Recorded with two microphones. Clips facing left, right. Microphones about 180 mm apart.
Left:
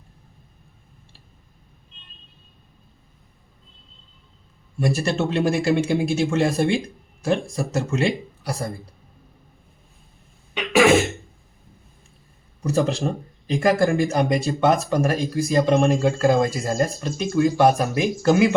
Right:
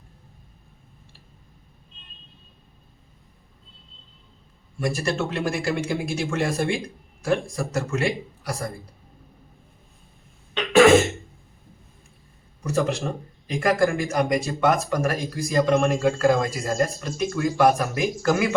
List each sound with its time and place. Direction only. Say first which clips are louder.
4.8 s speech: left 3 dB; 25° left (ahead or behind)
10.5 s cough: right 2 dB; 10° left (ahead or behind)
12.6 s speech: left 3 dB; 30° left (ahead or behind)